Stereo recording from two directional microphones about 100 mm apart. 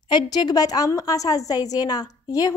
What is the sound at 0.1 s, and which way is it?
A woman's voice, 45° left (ahead or behind).